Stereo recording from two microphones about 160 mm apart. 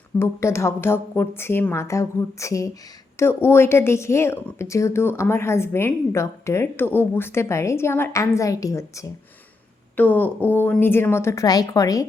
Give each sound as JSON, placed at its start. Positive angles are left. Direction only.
{"t": 0.2, "sound": "a woman's voice", "side_deg": 15}